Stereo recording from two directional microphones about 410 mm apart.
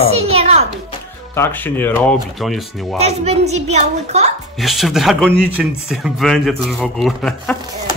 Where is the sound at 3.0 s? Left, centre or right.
Centre.